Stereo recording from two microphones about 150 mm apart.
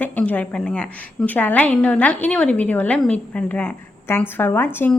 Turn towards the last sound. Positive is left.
turn(degrees=15)  # may be behind; listen again after turning